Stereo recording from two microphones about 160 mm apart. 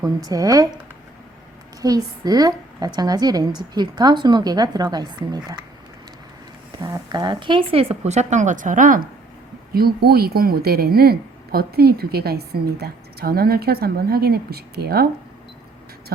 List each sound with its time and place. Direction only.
0.0 s a woman's voice: 25° right (ahead or behind)
1.8 s a woman's voice: 25° right (ahead or behind)
6.8 s speech: 25° right (ahead or behind); by 9.0 s 55° right (ahead or behind)
9.7 s a woman's voice: 75° right (ahead or behind)